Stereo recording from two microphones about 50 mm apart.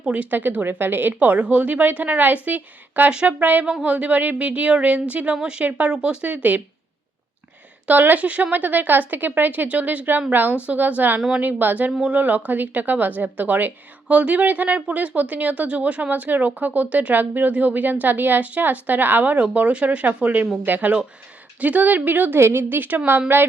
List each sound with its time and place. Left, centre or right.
0.0 s speech: right
0.6 s a woman's voice: right
7.9 s a woman's voice: right
22.4 s a woman's voice: right